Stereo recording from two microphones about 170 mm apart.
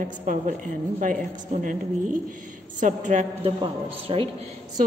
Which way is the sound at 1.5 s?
50° right (ahead or behind).